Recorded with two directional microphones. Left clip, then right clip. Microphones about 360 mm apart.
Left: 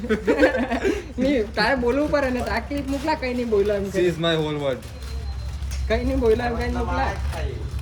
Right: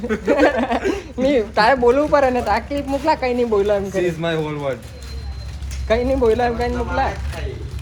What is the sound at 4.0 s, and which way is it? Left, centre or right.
Speech, centre.